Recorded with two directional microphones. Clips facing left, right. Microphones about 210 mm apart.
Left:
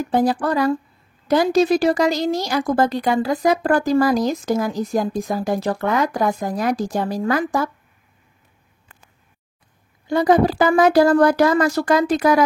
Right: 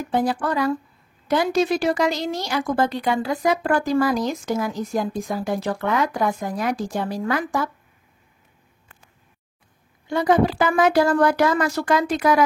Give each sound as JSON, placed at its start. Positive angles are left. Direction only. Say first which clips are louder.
{"t": 0.1, "sound": "a woman's voice", "louder": "left 3 dB", "side_deg": 40}
{"t": 10.0, "sound": "a woman's voice", "louder": "left 3 dB", "side_deg": 35}